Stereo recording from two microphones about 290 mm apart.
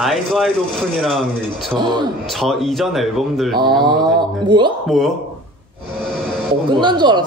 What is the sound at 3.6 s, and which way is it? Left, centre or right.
Speech, centre.